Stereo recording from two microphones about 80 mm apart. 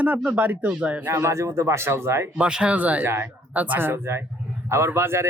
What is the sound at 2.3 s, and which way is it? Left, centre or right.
Speech, centre.